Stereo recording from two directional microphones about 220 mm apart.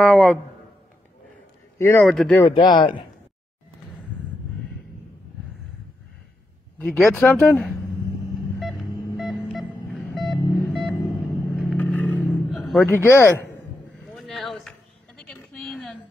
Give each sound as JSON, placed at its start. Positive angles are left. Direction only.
{"t": 0.0, "sound": "speech", "side_deg": 0}
{"t": 1.8, "sound": "speech", "side_deg": 10}
{"t": 2.3, "sound": "speech", "side_deg": 15}
{"t": 6.8, "sound": "speech", "side_deg": 0}
{"t": 8.5, "sound": "a sound", "side_deg": 0}
{"t": 11.7, "sound": "vehicle", "side_deg": 5}
{"t": 12.8, "sound": "speech", "side_deg": 10}
{"t": 14.0, "sound": "a sound", "side_deg": 0}